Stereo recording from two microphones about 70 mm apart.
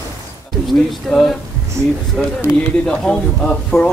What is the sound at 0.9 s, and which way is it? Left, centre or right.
Speech, centre.